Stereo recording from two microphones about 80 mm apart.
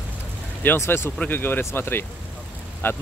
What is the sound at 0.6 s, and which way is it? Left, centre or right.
Speech, left.